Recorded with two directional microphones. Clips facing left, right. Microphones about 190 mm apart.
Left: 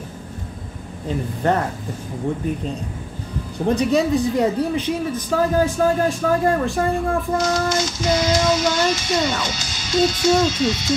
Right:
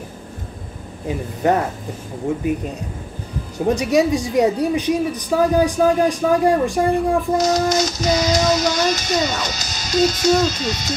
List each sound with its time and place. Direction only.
1.0 s speech: 10° right (ahead or behind)
3.6 s speech: 10° right (ahead or behind)
7.3 s speech: 40° right (ahead or behind)